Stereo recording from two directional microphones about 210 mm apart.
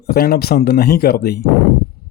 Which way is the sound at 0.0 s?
45° left (ahead or behind).